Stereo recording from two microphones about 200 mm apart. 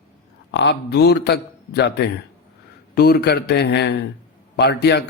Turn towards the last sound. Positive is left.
turn(degrees=55)  # may be behind; listen again after turning